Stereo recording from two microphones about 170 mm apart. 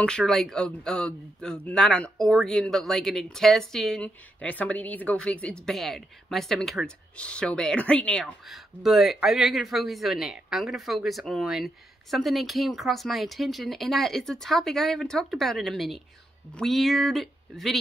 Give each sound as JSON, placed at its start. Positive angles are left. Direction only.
{"t": 0.0, "sound": "speech", "side_deg": 5}